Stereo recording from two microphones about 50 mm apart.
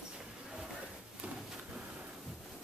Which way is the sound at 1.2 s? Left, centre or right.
Right.